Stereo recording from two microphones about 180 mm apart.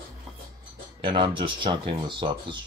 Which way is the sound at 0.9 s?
25° right (ahead or behind).